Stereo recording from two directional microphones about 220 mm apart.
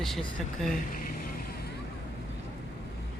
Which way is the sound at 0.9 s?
40° left (ahead or behind).